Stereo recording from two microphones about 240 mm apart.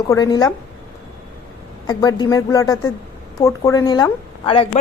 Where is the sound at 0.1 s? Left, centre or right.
Centre.